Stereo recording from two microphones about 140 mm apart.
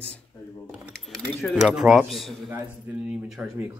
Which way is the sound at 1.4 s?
5° right (ahead or behind).